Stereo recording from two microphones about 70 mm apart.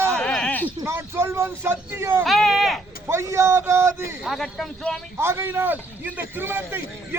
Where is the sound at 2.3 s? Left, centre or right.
Centre.